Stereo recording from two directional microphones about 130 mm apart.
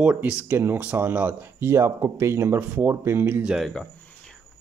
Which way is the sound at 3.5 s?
Centre (ahead or behind).